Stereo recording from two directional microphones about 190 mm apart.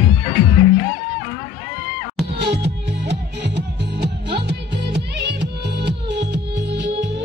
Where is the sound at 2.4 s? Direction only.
65° right (ahead or behind).